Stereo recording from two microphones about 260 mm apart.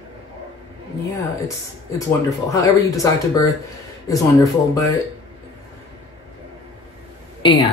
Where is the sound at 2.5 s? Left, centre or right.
Centre.